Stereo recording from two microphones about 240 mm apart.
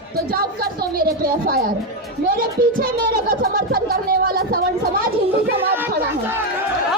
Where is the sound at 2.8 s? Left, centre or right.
Right.